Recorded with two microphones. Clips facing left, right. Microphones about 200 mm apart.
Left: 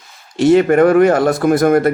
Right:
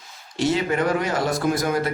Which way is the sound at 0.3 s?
55° left (ahead or behind).